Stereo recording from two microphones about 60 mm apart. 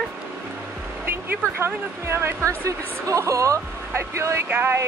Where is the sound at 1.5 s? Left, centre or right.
Right.